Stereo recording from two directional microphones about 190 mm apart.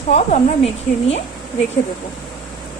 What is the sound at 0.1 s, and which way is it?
A woman's voice, 35° left (ahead or behind).